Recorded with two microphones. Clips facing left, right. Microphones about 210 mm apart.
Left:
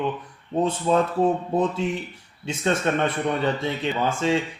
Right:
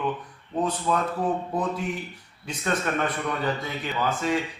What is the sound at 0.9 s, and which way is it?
A man's voice, 25° left (ahead or behind).